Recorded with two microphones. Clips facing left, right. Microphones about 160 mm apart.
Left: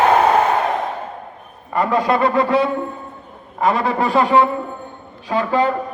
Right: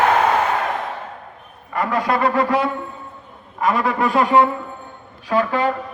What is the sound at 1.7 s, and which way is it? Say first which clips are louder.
A man's voice: left 3 dB; 25° left (ahead or behind).